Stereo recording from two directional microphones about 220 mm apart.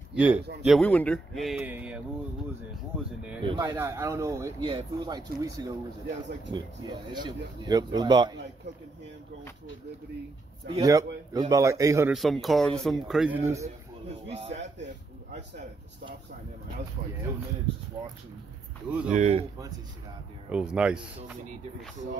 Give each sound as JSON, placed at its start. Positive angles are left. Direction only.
{"t": 0.1, "sound": "speech", "side_deg": -5}
{"t": 0.7, "sound": "speech", "side_deg": 5}
{"t": 3.4, "sound": "speech", "side_deg": -20}
{"t": 10.8, "sound": "speech", "side_deg": -15}
{"t": 12.1, "sound": "speech", "side_deg": 0}
{"t": 14.3, "sound": "speech", "side_deg": -30}
{"t": 19.0, "sound": "speech", "side_deg": -30}
{"t": 20.5, "sound": "speech", "side_deg": -5}